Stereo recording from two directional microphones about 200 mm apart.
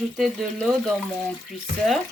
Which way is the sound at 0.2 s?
Centre (ahead or behind).